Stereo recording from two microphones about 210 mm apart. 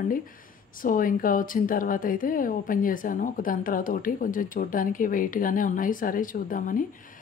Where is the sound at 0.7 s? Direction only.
40° left (ahead or behind).